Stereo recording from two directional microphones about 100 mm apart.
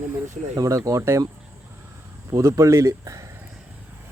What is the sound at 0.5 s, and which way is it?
Speech, 35° right (ahead or behind).